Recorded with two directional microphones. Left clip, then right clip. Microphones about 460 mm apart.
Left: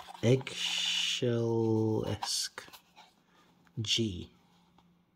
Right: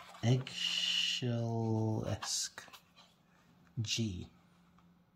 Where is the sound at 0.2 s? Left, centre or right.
Centre.